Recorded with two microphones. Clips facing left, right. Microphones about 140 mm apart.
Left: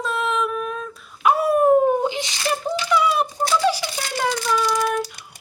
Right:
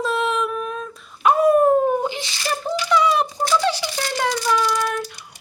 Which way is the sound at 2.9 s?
5° left (ahead or behind).